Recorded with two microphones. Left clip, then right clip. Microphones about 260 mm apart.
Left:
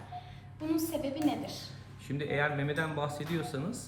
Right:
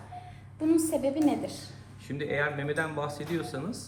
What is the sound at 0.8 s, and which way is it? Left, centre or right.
A woman's voice, centre.